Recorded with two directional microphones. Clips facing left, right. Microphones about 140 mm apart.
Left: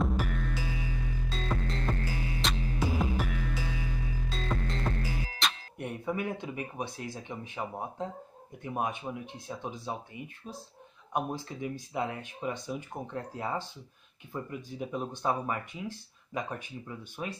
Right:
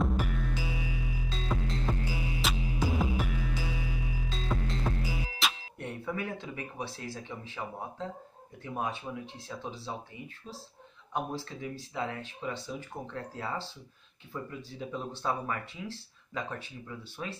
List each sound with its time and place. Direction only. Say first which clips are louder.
0.0 s music: even; centre (ahead or behind)
5.8 s speech: left 4 dB; 15° left (ahead or behind)